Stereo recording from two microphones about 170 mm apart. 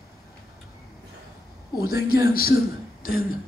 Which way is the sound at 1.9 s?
65° left (ahead or behind).